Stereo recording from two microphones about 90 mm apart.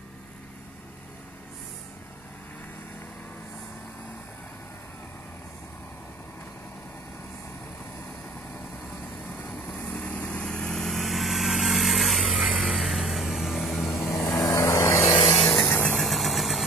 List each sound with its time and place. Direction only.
9.5 s vehicle: 5° left (ahead or behind)
12.2 s ratchet: 10° right (ahead or behind)
12.7 s music: centre (ahead or behind)
13.9 s vehicle: 20° left (ahead or behind)
14.2 s vehicle: 35° left (ahead or behind)
15.3 s vehicle: centre (ahead or behind)
15.6 s vehicle: 25° left (ahead or behind)
16.0 s vehicle: centre (ahead or behind)